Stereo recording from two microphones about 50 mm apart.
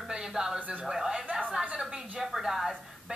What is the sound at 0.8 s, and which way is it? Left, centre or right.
Speech, centre.